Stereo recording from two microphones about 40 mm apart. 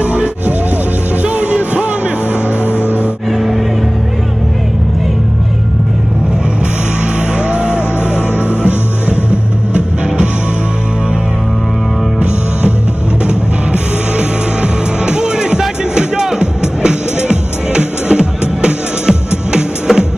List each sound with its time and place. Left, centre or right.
0.0 s music: right
2.6 s music: left
3.3 s music: centre
7.0 s music: right
9.3 s music: right
13.3 s music: right